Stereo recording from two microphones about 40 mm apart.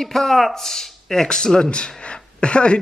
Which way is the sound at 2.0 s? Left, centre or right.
Left.